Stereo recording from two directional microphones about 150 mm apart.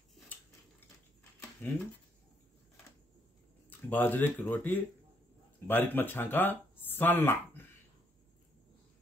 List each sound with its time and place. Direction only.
1.6 s speech: 10° left (ahead or behind)
3.9 s speech: 10° left (ahead or behind)